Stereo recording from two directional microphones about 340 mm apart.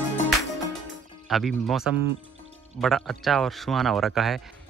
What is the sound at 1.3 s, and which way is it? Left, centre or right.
Speech, centre.